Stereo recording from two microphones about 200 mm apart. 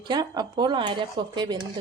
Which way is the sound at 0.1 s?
20° right (ahead or behind).